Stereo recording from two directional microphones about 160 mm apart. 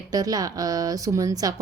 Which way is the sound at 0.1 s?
25° right (ahead or behind).